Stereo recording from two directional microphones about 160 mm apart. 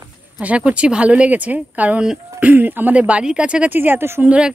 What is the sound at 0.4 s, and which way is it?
Speech, 10° right (ahead or behind).